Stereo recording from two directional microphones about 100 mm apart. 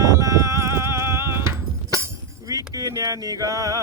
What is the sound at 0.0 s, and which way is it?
Clip-clop, 35° right (ahead or behind).